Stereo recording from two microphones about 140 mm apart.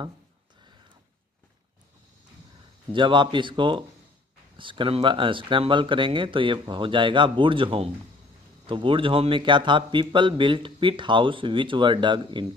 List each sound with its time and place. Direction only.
2.9 s a man's voice: 35° right (ahead or behind)